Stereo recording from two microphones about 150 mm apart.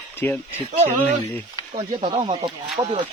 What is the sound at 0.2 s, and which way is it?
Speech, 15° left (ahead or behind).